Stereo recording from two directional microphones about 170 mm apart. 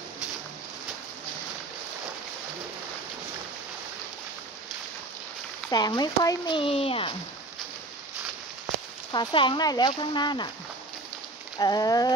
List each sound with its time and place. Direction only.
5.7 s speech: 25° left (ahead or behind)
9.1 s speech: 25° left (ahead or behind)
11.5 s speech: 25° left (ahead or behind)